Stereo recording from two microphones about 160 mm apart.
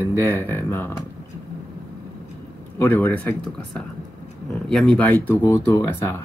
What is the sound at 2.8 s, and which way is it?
Speech, 10° left (ahead or behind).